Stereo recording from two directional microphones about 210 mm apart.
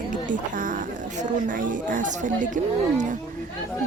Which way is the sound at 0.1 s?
40° right (ahead or behind).